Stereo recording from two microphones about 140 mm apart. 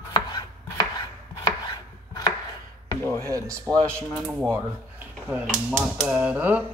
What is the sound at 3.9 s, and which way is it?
Speech, 15° right (ahead or behind).